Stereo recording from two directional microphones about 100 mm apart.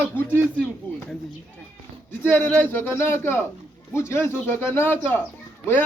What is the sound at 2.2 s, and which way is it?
A man's voice, 15° left (ahead or behind).